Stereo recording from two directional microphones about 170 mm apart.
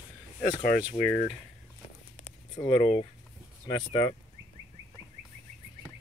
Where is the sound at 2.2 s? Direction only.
40° left (ahead or behind).